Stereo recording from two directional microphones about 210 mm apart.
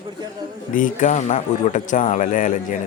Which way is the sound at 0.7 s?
40° left (ahead or behind).